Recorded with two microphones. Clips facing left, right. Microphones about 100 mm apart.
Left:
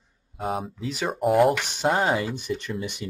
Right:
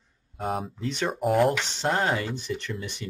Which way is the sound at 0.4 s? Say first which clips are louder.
Left 1 dB; centre (ahead or behind).